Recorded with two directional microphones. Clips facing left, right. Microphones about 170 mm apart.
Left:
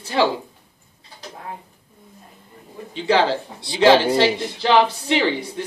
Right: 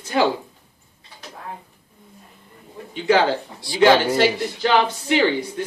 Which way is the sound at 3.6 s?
25° left (ahead or behind).